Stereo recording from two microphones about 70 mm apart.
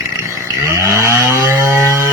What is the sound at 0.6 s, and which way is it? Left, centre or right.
Chainsaw, right.